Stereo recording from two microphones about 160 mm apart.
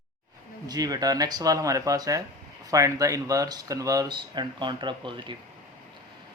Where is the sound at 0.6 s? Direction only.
25° right (ahead or behind).